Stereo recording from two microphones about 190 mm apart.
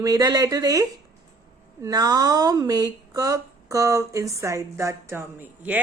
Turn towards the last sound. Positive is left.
turn(degrees=-10)  # may be behind; listen again after turning